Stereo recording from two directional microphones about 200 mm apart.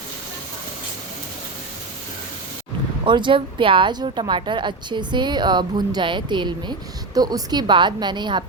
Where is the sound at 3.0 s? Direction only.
25° right (ahead or behind).